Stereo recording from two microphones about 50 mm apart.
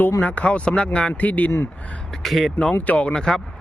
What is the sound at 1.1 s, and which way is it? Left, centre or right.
Speech, left.